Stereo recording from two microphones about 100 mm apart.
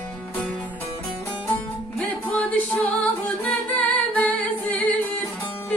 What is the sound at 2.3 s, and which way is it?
Music, 15° left (ahead or behind).